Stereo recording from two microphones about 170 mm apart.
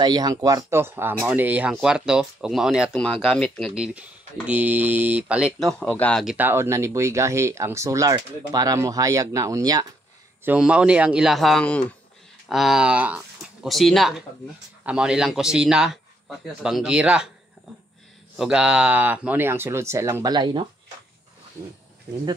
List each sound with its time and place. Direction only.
0.0 s speech: 25° right (ahead or behind); by 6.2 s 10° left (ahead or behind)
6.2 s speech: 10° right (ahead or behind)
10.4 s speech: 10° right (ahead or behind)
18.4 s speech: 5° right (ahead or behind); by 20.6 s 25° right (ahead or behind)